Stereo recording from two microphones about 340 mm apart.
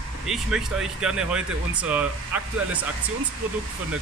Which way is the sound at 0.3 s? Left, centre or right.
Centre.